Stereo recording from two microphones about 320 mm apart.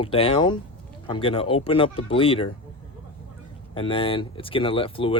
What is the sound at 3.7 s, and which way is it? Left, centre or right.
Speech, centre.